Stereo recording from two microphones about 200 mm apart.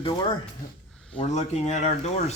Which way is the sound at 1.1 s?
35° left (ahead or behind).